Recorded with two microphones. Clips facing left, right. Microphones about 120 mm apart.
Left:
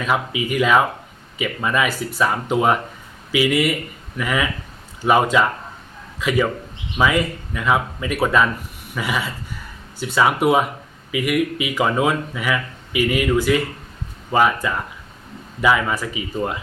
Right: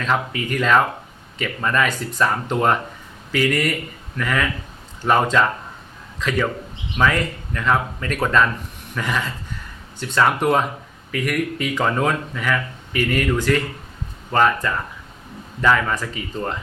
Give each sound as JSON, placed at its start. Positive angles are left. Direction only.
{"t": 0.0, "sound": "speech", "side_deg": 10}